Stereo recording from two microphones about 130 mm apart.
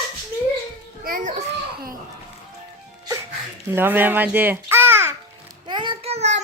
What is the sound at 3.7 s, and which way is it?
A child's voice, 15° right (ahead or behind).